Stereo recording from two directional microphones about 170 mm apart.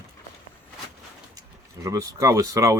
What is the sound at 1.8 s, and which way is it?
Speech, 20° right (ahead or behind).